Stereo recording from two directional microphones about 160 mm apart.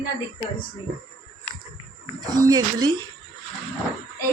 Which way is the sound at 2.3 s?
25° right (ahead or behind).